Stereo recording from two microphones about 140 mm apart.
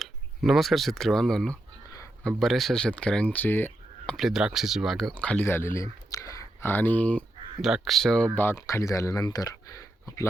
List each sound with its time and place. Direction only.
0.0 s speech: centre (ahead or behind)
7.6 s speech: centre (ahead or behind)
8.4 s speech: 20° left (ahead or behind)